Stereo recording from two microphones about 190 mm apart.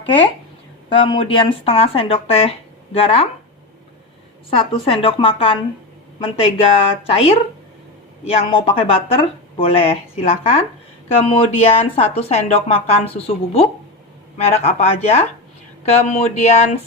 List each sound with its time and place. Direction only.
0.9 s speech: 25° left (ahead or behind)
4.4 s speech: 30° left (ahead or behind)
8.4 s speech: 30° left (ahead or behind)